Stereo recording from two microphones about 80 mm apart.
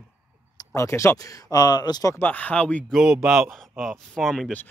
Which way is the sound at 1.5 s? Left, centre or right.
Left.